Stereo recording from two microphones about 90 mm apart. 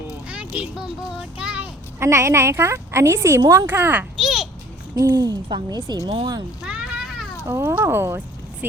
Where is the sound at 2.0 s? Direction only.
30° right (ahead or behind).